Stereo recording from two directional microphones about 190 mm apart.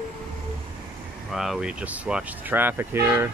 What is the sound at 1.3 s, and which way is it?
Speech, centre (ahead or behind).